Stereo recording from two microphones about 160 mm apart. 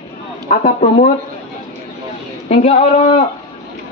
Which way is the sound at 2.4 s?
40° left (ahead or behind).